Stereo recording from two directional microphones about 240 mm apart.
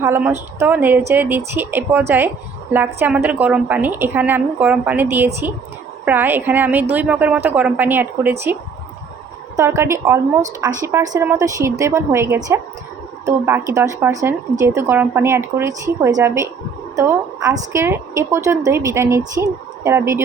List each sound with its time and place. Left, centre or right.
0.0 s a woman's voice: centre
9.6 s a woman's voice: centre